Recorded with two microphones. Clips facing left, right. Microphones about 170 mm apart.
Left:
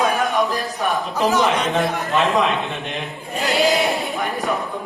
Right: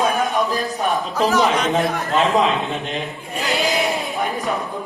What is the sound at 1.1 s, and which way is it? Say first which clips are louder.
Speech: even; 20° left (ahead or behind).